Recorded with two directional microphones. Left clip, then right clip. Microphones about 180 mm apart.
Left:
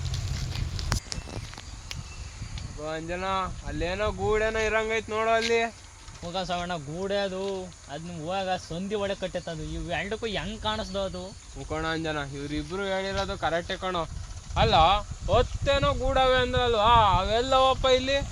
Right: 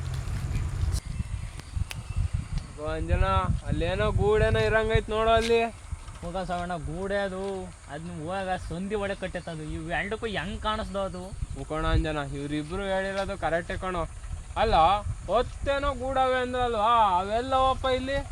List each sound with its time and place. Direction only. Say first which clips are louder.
2.8 s speech: right 1 dB; 30° right (ahead or behind)
6.2 s speech: left 1 dB; 10° left (ahead or behind)
7.1 s speech: left 1 dB; 30° left (ahead or behind)
11.7 s speech: even; 35° right (ahead or behind); by 14.1 s 15° right (ahead or behind)
14.5 s speech: left 1 dB; centre (ahead or behind); by 18.2 s 50° left (ahead or behind)